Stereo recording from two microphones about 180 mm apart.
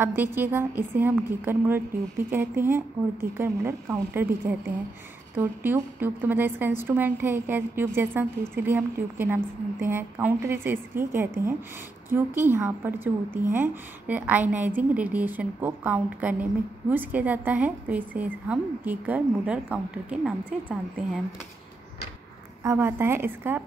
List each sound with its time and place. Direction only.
0.0 s a woman's voice: 10° right (ahead or behind)
22.6 s a woman's voice: 15° right (ahead or behind)